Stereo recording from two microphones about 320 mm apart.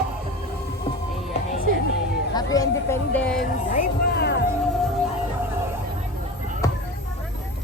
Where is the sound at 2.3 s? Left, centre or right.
Centre.